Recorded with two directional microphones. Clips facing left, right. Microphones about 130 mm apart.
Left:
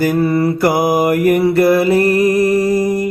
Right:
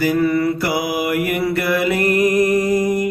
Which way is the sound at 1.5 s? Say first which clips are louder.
Left 7 dB; 35° left (ahead or behind).